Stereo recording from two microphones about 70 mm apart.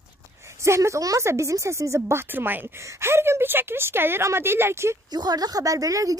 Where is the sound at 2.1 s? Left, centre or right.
Right.